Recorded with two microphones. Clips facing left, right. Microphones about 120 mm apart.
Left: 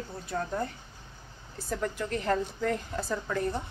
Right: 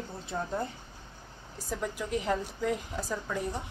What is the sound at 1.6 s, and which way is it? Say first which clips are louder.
A woman's voice: left 2 dB; 10° right (ahead or behind).